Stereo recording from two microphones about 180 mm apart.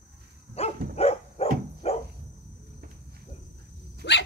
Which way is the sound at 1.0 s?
35° left (ahead or behind).